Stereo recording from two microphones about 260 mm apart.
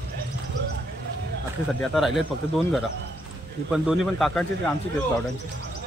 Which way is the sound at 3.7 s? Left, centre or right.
Centre.